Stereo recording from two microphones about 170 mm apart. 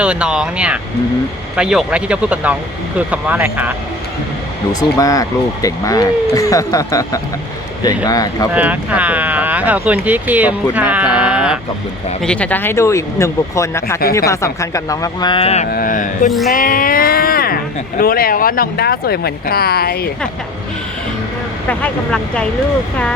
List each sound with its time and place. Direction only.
0.0 s speech: 5° right (ahead or behind)
4.7 s speech: 20° left (ahead or behind)
8.5 s speech: 10° right (ahead or behind)
12.2 s speech: 5° left (ahead or behind); by 15.6 s 35° left (ahead or behind)
15.7 s carnatic music: 55° left (ahead or behind)
16.5 s speech: 55° left (ahead or behind)
21.7 s speech: 10° left (ahead or behind)